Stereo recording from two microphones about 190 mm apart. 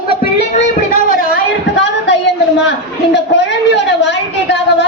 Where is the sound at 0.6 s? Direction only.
40° left (ahead or behind).